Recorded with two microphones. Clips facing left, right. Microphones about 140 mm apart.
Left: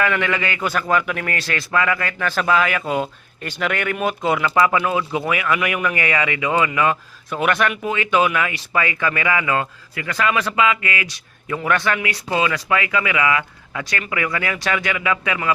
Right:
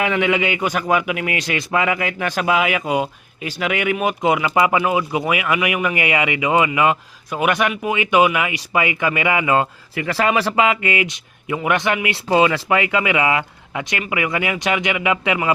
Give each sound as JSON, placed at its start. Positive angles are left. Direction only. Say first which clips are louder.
{"t": 0.0, "sound": "a man's voice", "louder": "right 2 dB", "side_deg": -15}